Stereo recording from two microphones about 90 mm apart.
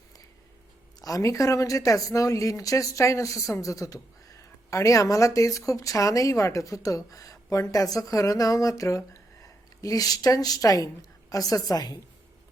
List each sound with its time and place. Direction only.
1.0 s a woman's voice: 40° left (ahead or behind)